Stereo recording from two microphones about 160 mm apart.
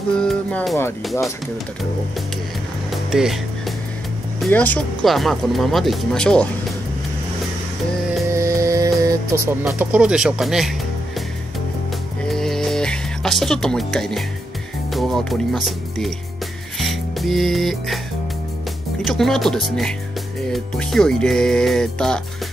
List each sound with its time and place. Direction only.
0.2 s speech: 5° left (ahead or behind)
2.9 s music: 5° right (ahead or behind)
4.5 s speech: 10° left (ahead or behind)
8.3 s music: 20° right (ahead or behind)
9.8 s speech: 5° right (ahead or behind)
12.3 s music: 5° left (ahead or behind)
14.9 s speech: centre (ahead or behind)
16.7 s music: centre (ahead or behind)
19.0 s speech: centre (ahead or behind)